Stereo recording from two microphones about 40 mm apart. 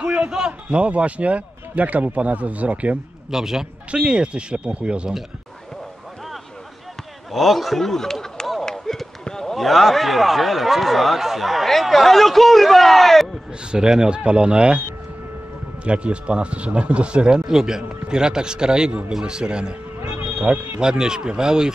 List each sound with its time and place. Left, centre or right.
0.0 s a sound: right
0.7 s speech: right
3.3 s a man's voice: centre
3.9 s speech: right
7.3 s speech: centre
8.6 s a sound: centre
9.6 s speech: centre
13.7 s speech: centre
15.8 s speech: right
17.5 s a man's voice: centre
20.0 s music: right
20.8 s a man's voice: centre